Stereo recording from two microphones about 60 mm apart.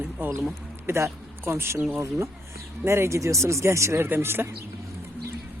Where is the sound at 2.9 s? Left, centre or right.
Right.